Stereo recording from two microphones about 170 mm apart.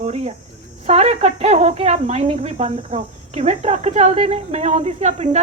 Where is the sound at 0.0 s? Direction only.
40° right (ahead or behind).